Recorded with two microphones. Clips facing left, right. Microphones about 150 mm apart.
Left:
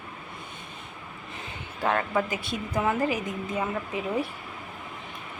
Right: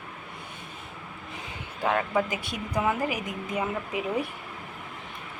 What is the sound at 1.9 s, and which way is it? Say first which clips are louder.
Speech: even; 5° right (ahead or behind).